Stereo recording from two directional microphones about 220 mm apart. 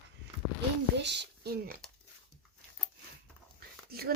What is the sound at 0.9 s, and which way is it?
Speech, 50° right (ahead or behind).